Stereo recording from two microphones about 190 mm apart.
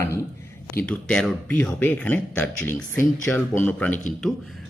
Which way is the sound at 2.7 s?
45° left (ahead or behind).